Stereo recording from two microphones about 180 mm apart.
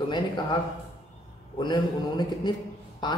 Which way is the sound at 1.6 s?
25° left (ahead or behind).